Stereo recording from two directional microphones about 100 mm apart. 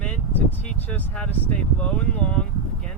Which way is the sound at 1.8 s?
15° left (ahead or behind).